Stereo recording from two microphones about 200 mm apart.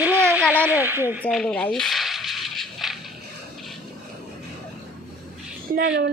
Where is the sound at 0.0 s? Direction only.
10° right (ahead or behind).